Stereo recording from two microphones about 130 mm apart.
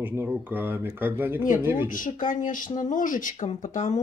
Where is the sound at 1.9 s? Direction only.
90° left.